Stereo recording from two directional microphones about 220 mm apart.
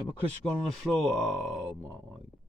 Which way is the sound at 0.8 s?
Centre (ahead or behind).